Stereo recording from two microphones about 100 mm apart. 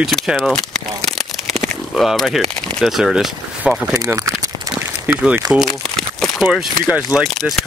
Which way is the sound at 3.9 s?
35° right (ahead or behind).